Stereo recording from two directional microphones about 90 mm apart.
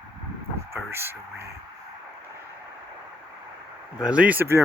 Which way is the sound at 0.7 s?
25° right (ahead or behind).